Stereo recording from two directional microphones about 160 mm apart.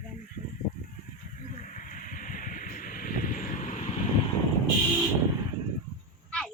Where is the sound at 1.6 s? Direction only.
55° left (ahead or behind).